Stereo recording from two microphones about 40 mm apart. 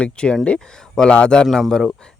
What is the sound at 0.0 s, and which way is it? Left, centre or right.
Speech, left.